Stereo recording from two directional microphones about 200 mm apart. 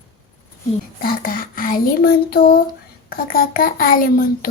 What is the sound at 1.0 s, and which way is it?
Speech, 45° left (ahead or behind).